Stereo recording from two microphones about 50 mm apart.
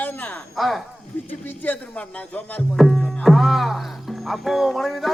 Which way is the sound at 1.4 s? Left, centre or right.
Left.